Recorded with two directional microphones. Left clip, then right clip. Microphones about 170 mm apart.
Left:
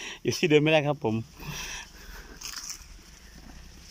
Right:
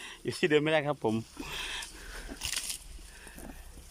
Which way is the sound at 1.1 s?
Centre (ahead or behind).